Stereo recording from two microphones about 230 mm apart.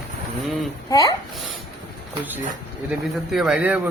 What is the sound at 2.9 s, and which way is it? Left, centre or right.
Speech, centre.